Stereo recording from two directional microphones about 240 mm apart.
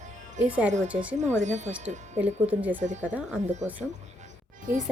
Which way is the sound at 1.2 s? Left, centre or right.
Right.